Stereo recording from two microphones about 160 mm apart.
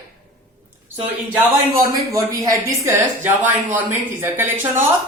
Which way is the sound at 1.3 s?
20° right (ahead or behind).